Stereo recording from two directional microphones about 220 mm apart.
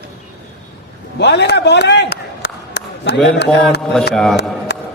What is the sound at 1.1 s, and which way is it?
A man's voice, 50° left (ahead or behind).